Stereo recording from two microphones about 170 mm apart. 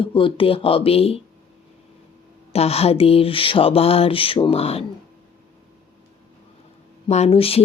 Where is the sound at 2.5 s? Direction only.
35° left (ahead or behind).